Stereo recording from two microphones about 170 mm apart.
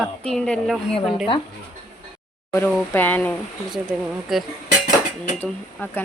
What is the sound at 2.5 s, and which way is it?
Speech, 10° left (ahead or behind).